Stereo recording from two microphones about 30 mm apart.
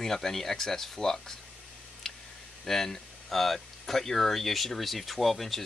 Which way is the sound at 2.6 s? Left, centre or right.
Centre.